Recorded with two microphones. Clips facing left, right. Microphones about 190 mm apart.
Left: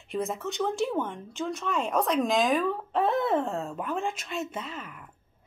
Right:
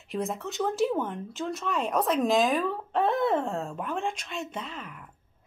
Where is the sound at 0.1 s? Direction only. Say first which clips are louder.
Left 1 dB; centre (ahead or behind).